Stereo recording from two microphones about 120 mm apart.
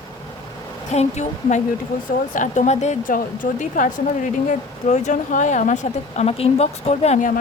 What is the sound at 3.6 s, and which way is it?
Speech, 90° left.